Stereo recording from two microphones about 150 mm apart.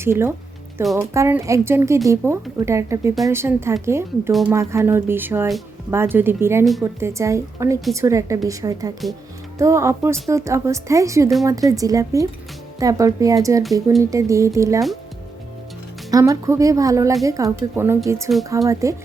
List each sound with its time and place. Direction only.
0.0 s a woman's voice: 15° right (ahead or behind)
4.3 s speech: centre (ahead or behind)
4.5 s a woman's voice: 20° right (ahead or behind)
16.1 s speech: 20° right (ahead or behind)